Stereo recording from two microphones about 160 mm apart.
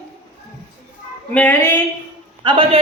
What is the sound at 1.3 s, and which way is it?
Speech, 10° left (ahead or behind).